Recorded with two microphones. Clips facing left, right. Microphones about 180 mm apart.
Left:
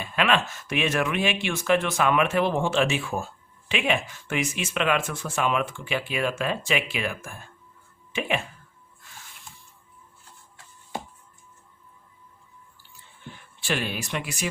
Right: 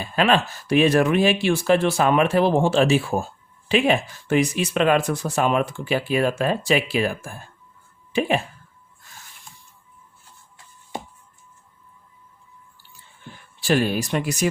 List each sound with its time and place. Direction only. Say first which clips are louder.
0.0 s speech: right 4 dB; 35° right (ahead or behind)
13.6 s speech: right 8 dB; 40° right (ahead or behind)